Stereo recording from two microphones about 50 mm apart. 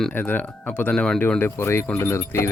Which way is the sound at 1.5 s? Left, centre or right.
Left.